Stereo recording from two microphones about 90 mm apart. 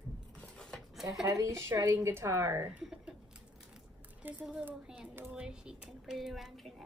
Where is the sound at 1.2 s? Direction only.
35° right (ahead or behind).